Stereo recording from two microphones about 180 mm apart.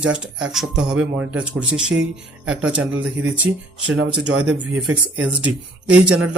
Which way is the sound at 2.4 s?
90° right.